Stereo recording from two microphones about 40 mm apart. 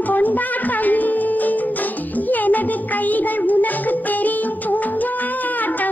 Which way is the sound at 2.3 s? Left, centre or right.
Left.